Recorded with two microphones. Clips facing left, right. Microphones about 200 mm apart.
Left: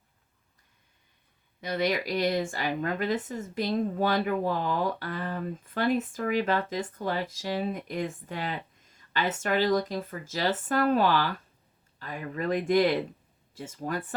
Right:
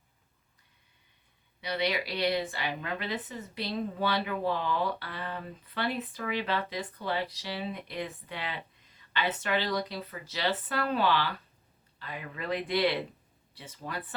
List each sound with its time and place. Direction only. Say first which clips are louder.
1.6 s speech: left 3 dB; 45° left (ahead or behind)